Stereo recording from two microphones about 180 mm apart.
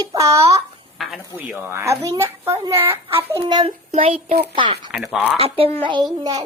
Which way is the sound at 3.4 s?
30° right (ahead or behind).